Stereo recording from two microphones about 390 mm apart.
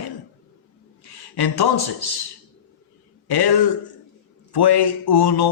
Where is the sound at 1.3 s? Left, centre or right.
Left.